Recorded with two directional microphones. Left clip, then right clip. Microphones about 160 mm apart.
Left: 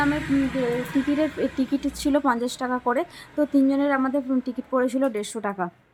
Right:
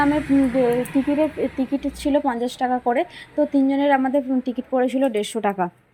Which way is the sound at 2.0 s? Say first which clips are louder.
Right 1 dB; 5° left (ahead or behind).